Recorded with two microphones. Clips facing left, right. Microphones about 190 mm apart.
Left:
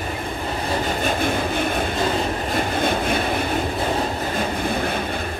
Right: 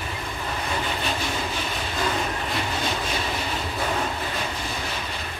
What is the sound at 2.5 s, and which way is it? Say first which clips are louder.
Vehicle: left 8 dB; 55° left (ahead or behind).